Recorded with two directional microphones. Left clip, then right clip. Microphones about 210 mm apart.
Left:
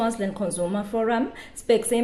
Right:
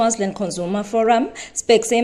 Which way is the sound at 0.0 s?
25° right (ahead or behind).